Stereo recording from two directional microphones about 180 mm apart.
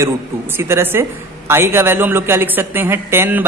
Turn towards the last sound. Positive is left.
turn(degrees=-10)  # may be behind; listen again after turning